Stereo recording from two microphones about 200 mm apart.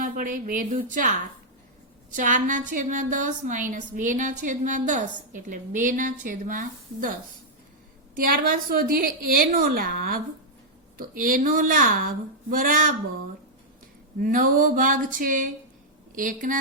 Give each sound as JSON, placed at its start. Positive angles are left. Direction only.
{"t": 0.0, "sound": "a woman's voice", "side_deg": -45}
{"t": 2.1, "sound": "a woman's voice", "side_deg": -40}
{"t": 8.1, "sound": "a woman's voice", "side_deg": -45}
{"t": 14.2, "sound": "a woman's voice", "side_deg": -45}